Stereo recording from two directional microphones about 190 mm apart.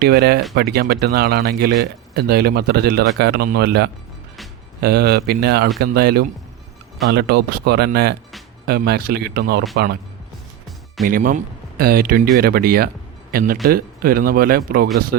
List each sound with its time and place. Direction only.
0.0 s speech: 55° right (ahead or behind)
11.0 s speech: 45° right (ahead or behind)